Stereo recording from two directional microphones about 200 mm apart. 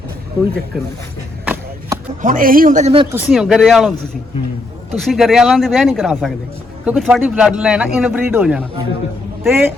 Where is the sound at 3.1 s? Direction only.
Centre (ahead or behind).